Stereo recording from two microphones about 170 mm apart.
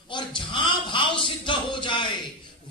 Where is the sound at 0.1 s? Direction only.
30° left (ahead or behind).